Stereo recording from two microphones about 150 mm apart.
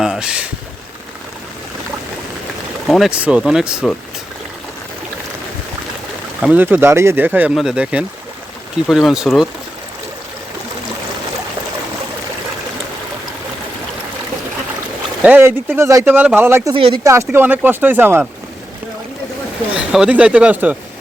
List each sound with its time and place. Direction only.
0.0 s a sound: 5° right (ahead or behind)
2.8 s speech: centre (ahead or behind)
6.4 s speech: 10° right (ahead or behind)
15.2 s speech: 15° right (ahead or behind)
16.7 s speech: 35° right (ahead or behind)
17.0 s speech: 20° right (ahead or behind)
19.7 s speech: 5° right (ahead or behind)